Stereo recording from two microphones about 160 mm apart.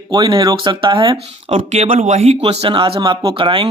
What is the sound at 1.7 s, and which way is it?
Speech, 45° right (ahead or behind).